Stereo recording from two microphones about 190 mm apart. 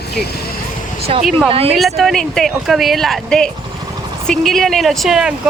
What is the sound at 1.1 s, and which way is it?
Speech, 30° right (ahead or behind).